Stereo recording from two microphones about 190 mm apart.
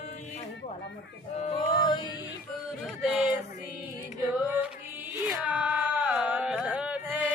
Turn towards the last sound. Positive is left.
turn(degrees=-5)  # may be behind; listen again after turning